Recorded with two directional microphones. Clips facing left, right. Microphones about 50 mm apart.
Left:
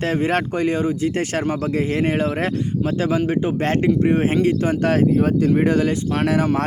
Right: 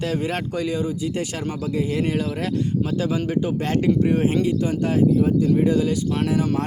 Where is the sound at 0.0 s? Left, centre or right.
Left.